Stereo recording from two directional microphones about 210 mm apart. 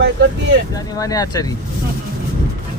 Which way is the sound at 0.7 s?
15° left (ahead or behind).